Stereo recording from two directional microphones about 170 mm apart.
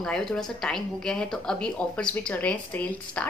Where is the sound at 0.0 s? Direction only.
5° left (ahead or behind).